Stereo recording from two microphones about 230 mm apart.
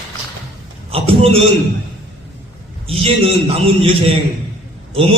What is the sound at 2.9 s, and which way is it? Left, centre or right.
A man's voice, right.